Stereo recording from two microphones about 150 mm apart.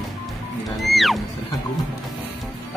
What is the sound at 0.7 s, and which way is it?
Music, centre (ahead or behind).